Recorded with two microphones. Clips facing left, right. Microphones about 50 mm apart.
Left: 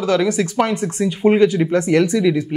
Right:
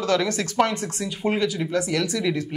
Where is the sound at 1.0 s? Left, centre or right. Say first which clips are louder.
Left 11 dB; left.